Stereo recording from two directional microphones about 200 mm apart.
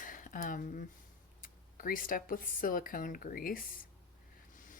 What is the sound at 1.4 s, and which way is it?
Speech, 45° left (ahead or behind).